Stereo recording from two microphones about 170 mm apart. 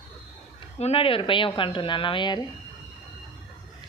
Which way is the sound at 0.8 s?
35° left (ahead or behind).